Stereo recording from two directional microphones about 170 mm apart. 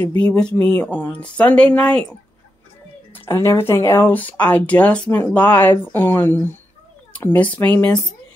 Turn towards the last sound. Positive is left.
turn(degrees=10)  # may be behind; listen again after turning